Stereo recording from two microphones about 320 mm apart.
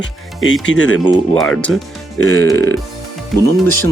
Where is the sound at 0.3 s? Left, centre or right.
Left.